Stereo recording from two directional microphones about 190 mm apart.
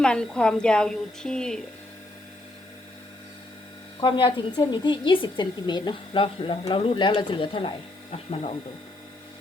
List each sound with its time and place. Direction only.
0.0 s a woman's voice: 5° left (ahead or behind)
4.0 s speech: 25° left (ahead or behind)